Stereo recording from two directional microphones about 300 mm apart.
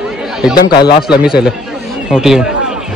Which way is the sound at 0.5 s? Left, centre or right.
Left.